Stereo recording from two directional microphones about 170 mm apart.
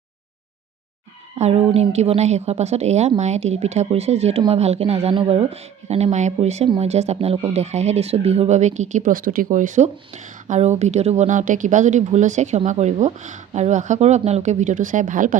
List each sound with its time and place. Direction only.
1.4 s a woman's voice: 35° right (ahead or behind)
5.5 s a woman's voice: 40° right (ahead or behind)